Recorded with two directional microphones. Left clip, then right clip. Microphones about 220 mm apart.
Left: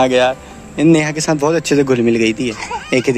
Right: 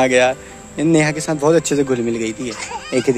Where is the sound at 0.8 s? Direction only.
5° right (ahead or behind).